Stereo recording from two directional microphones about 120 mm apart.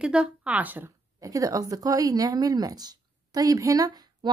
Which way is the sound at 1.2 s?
30° right (ahead or behind).